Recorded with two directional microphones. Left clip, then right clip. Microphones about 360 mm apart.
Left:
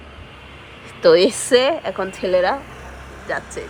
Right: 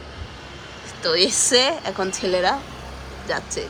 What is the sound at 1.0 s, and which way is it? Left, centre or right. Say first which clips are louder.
Speech: left 6 dB; centre.